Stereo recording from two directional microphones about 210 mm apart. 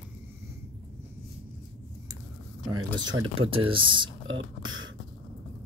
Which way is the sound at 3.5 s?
25° right (ahead or behind).